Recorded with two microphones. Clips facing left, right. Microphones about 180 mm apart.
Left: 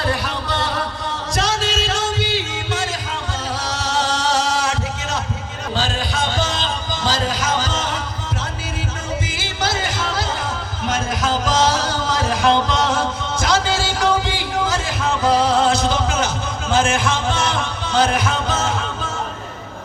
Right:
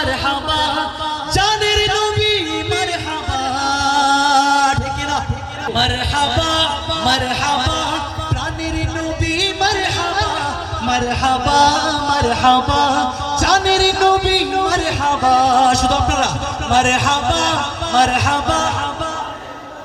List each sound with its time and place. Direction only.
0.3 s a sound: 85° right
1.3 s music: 75° right (ahead or behind)
6.3 s music: 70° right (ahead or behind)
9.2 s music: 70° right (ahead or behind)
10.8 s music: 70° right (ahead or behind)